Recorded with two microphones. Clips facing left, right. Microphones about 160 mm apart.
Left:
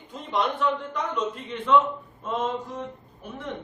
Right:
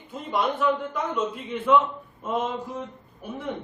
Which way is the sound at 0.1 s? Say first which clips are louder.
Right 1 dB; 5° right (ahead or behind).